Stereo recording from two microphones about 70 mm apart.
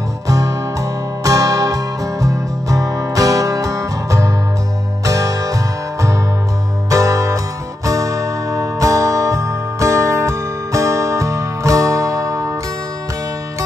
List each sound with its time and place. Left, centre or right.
0.3 s music: right